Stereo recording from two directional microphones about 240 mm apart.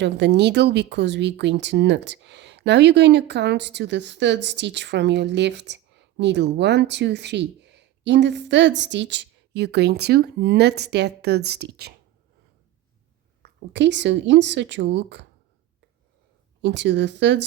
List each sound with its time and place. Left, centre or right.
0.0 s speech: right
13.4 s speech: right
16.6 s speech: right